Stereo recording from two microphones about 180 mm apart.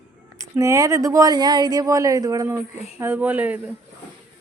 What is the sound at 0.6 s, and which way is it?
Speech, 15° right (ahead or behind).